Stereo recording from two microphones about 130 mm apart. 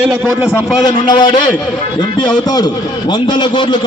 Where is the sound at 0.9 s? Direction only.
35° left (ahead or behind).